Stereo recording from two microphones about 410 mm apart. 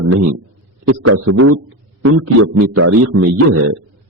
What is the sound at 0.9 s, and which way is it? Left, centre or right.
A man's voice, right.